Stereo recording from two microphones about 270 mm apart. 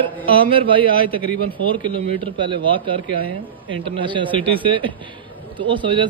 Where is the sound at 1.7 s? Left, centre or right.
Centre.